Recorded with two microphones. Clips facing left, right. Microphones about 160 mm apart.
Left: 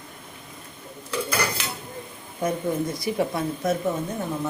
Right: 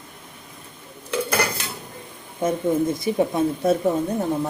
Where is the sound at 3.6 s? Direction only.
35° right (ahead or behind).